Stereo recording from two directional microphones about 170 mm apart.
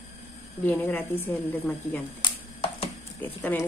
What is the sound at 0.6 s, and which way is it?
A woman's voice, 10° left (ahead or behind).